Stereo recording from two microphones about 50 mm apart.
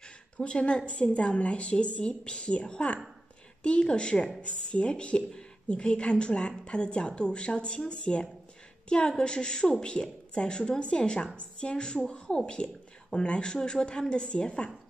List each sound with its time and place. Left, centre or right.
0.0 s a woman's voice: centre